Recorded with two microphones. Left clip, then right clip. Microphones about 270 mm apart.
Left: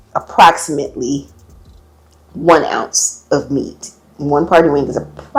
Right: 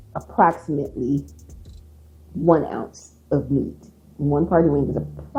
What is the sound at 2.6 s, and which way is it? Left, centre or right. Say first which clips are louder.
Speech: left 13 dB; centre.